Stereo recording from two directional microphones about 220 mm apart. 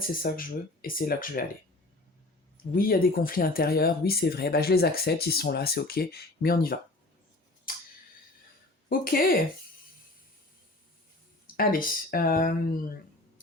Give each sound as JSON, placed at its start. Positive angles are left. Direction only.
{"t": 0.1, "sound": "speech", "side_deg": 40}
{"t": 2.7, "sound": "speech", "side_deg": 40}
{"t": 8.9, "sound": "speech", "side_deg": 40}
{"t": 11.5, "sound": "speech", "side_deg": 40}